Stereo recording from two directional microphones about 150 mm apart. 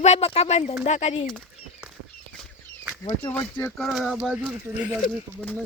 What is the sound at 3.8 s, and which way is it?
Speech, centre (ahead or behind).